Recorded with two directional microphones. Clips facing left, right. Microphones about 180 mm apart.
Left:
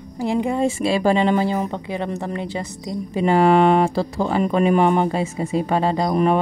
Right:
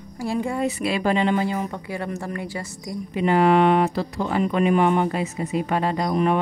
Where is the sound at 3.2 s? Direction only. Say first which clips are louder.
Left 2 dB; 35° left (ahead or behind).